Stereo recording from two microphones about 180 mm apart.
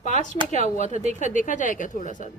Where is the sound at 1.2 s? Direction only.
45° left (ahead or behind).